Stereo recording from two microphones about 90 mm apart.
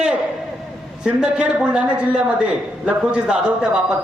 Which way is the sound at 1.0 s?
10° right (ahead or behind).